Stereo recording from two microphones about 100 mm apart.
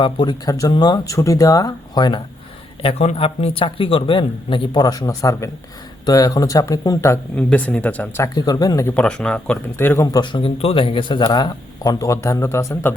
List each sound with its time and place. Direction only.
0.0 s speech: 55° left (ahead or behind)
0.4 s speech: 35° left (ahead or behind)
2.8 s speech: 70° left (ahead or behind)
4.8 s speech: 40° left (ahead or behind)
7.3 s speech: 15° left (ahead or behind)
8.4 s speech: 40° left (ahead or behind)
9.0 s speech: 10° left (ahead or behind)
9.7 s speech: 25° left (ahead or behind)
10.1 s speech: 50° left (ahead or behind)
10.6 s speech: 70° left (ahead or behind); by 12.9 s 30° left (ahead or behind)